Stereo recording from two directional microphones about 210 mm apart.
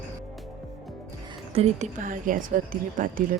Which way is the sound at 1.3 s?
25° right (ahead or behind).